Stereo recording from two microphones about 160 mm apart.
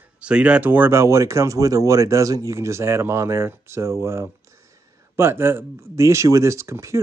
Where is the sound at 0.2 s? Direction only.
5° right (ahead or behind).